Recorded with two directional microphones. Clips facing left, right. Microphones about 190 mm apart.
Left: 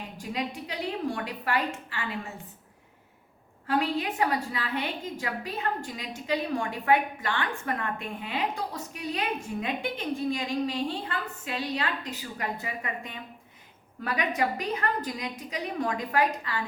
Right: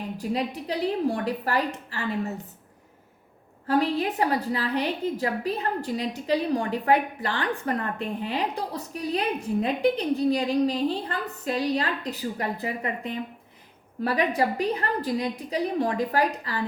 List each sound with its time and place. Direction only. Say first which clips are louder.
0.2 s a woman's voice: right 4 dB; 35° right (ahead or behind)
3.7 s a woman's voice: right 4 dB; 40° right (ahead or behind)